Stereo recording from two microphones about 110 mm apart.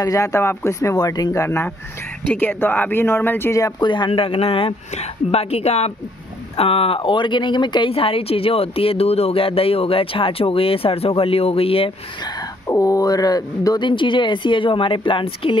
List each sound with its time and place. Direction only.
0.0 s speech: 30° left (ahead or behind)
3.8 s speech: 45° left (ahead or behind); by 5.9 s 70° left (ahead or behind)
6.5 s speech: 60° left (ahead or behind); by 7.9 s 45° left (ahead or behind)
7.9 s speech: 60° left (ahead or behind)
12.2 s a sound: 40° left (ahead or behind)
12.6 s speech: 30° left (ahead or behind); by 15.5 s 50° left (ahead or behind)